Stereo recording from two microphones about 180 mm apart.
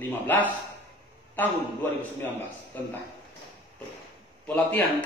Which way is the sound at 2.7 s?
10° left (ahead or behind).